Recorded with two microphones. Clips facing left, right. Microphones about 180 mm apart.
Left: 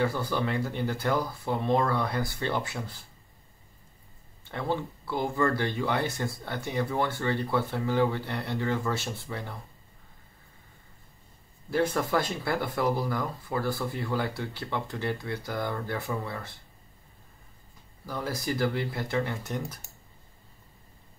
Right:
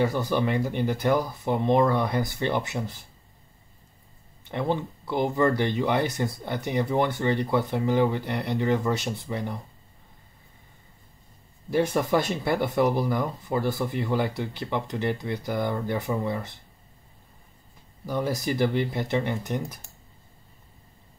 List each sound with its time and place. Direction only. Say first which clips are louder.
0.0 s speech: right 4 dB; 20° right (ahead or behind)
4.5 s speech: right 4 dB; 20° right (ahead or behind)
11.7 s speech: right 3 dB; 15° right (ahead or behind)
18.0 s speech: right 5 dB; 20° right (ahead or behind)